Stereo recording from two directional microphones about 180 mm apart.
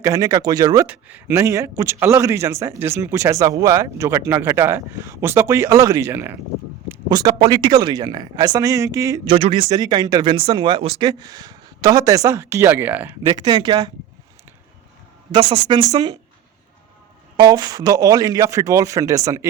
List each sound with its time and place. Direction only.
0.0 s speech: 20° right (ahead or behind)
0.9 s a man's voice: 10° right (ahead or behind)
9.2 s speech: 30° right (ahead or behind); by 13.1 s 10° right (ahead or behind)
13.2 s speech: 25° right (ahead or behind)
15.3 s speech: 25° right (ahead or behind)
17.3 s speech: 25° right (ahead or behind)